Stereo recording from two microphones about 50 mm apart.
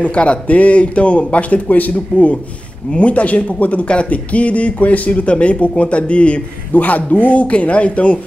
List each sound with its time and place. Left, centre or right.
0.0 s speech: left